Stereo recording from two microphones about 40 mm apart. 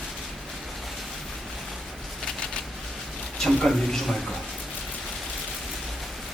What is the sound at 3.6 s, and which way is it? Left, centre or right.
Speech, centre.